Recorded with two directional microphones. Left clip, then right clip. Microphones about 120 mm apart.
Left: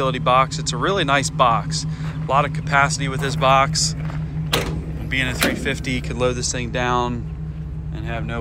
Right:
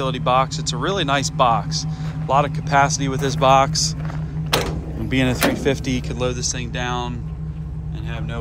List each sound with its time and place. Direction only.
0.0 s speech: 35° right (ahead or behind)
5.1 s speech: 55° right (ahead or behind)
6.1 s speech: 25° right (ahead or behind)